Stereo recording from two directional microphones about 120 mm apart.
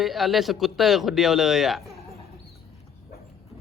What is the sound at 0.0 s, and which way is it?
Speech, centre (ahead or behind).